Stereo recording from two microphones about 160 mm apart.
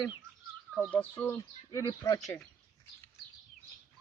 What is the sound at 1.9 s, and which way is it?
Speech, 25° left (ahead or behind).